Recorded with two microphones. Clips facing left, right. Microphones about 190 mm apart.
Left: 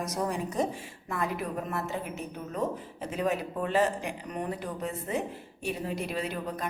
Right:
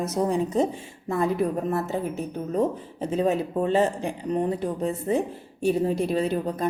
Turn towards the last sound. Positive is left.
turn(degrees=-30)  # may be behind; listen again after turning